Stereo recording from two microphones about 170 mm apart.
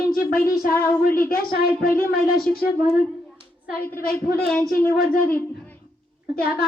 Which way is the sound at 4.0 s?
60° left (ahead or behind).